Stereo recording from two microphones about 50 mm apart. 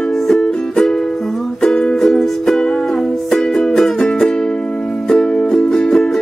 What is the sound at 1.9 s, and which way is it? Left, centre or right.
Music, centre.